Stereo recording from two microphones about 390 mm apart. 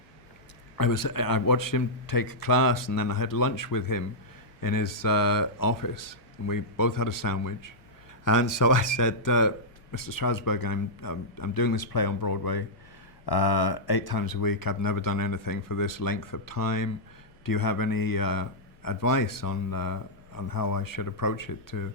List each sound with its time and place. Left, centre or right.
0.8 s a man's voice: left